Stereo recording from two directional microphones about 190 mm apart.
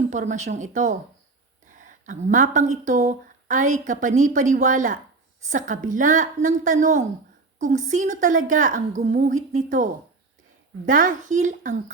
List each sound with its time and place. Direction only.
0.1 s a woman's voice: 40° right (ahead or behind)